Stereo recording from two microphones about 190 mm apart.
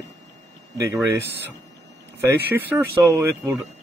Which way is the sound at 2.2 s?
10° right (ahead or behind).